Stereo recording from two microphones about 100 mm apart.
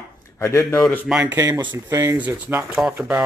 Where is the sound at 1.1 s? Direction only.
15° right (ahead or behind).